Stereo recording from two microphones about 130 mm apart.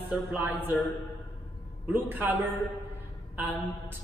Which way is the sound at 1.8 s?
15° right (ahead or behind).